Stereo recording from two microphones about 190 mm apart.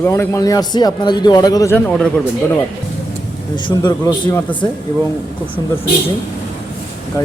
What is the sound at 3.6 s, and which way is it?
Speech, 25° left (ahead or behind).